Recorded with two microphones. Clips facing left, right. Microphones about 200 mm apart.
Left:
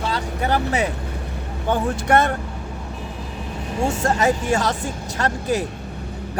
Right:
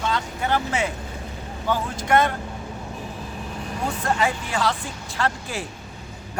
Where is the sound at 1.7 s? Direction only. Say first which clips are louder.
Left 3 dB; 50° left (ahead or behind).